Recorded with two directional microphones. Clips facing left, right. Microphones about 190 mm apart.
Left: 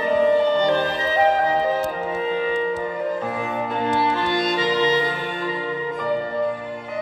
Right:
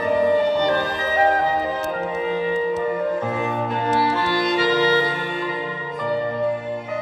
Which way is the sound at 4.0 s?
20° left (ahead or behind).